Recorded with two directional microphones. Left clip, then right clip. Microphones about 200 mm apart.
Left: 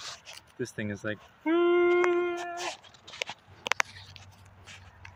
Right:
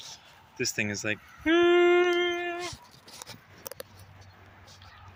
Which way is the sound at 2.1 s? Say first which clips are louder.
Right 2 dB; 5° left (ahead or behind).